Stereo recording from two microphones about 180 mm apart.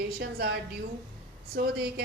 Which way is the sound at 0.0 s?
60° right (ahead or behind).